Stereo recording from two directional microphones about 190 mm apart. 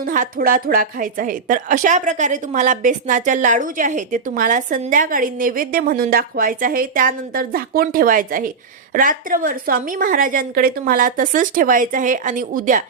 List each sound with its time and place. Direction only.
0.0 s a woman's voice: 45° right (ahead or behind)